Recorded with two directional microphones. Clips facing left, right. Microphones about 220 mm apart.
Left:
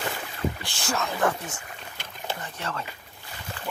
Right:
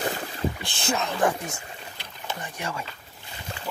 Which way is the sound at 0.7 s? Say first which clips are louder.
Right 2 dB; 20° right (ahead or behind).